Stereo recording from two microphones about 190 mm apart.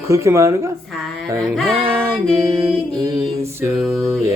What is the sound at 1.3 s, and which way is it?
Mantra, 5° left (ahead or behind).